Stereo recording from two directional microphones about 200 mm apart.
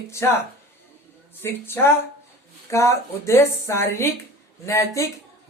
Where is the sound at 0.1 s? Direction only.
15° left (ahead or behind).